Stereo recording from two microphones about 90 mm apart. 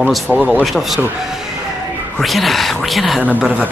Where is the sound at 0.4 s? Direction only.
15° right (ahead or behind).